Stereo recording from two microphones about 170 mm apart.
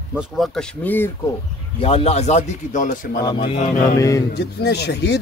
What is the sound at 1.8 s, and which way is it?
Speech, 35° left (ahead or behind).